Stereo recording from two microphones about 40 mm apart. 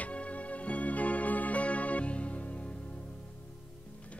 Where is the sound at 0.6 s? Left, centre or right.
Left.